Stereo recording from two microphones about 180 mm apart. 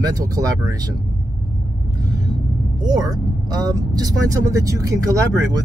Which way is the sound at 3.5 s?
20° right (ahead or behind).